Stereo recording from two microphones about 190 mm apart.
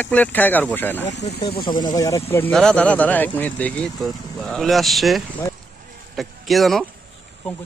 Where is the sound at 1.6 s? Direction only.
25° left (ahead or behind).